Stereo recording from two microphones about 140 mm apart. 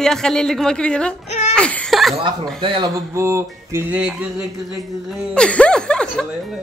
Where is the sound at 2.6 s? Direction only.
35° right (ahead or behind).